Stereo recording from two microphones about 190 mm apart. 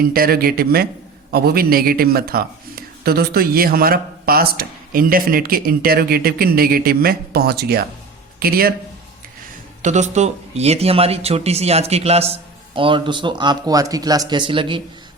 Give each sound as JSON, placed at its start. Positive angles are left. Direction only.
{"t": 0.0, "sound": "speech", "side_deg": -50}
{"t": 9.8, "sound": "speech", "side_deg": -40}